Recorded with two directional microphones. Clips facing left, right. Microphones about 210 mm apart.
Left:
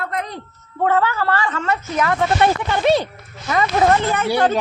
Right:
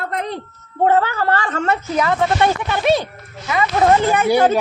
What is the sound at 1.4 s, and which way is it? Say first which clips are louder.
Speech: right 2 dB; 45° right (ahead or behind).